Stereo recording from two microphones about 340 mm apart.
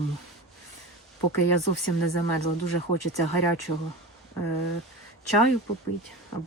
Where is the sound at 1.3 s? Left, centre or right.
Left.